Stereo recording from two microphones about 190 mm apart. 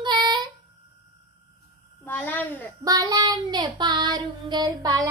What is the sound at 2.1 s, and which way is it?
Speech, 10° left (ahead or behind).